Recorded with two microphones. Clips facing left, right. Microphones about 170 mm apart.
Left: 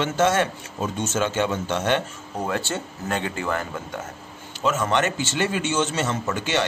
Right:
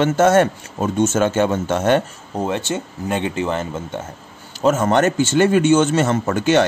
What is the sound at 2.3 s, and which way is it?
Speech, 25° right (ahead or behind).